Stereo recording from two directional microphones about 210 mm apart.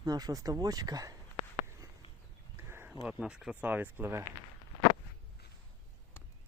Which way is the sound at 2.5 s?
10° right (ahead or behind).